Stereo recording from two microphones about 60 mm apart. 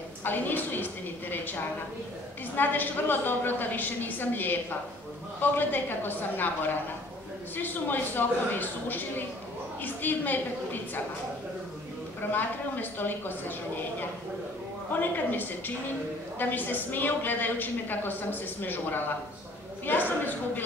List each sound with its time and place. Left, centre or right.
0.2 s a woman's voice: left
2.5 s a woman's voice: left
12.2 s a woman's voice: left
14.9 s a woman's voice: left